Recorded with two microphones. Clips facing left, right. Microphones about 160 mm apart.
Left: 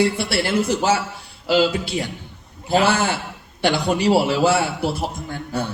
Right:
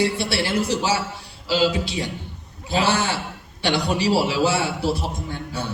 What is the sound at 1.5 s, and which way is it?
Speech, 55° left (ahead or behind).